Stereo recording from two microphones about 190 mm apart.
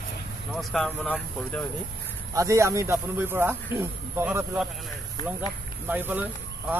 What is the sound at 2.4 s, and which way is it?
Speech, 15° right (ahead or behind).